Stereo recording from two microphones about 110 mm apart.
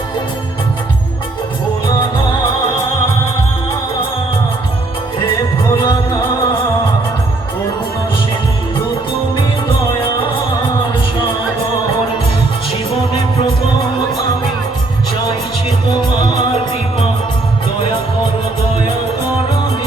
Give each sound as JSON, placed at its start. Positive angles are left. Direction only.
{"t": 5.7, "sound": "music", "side_deg": 45}
{"t": 9.3, "sound": "music", "side_deg": 50}